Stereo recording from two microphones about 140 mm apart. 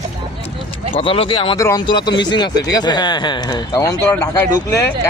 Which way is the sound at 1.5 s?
25° left (ahead or behind).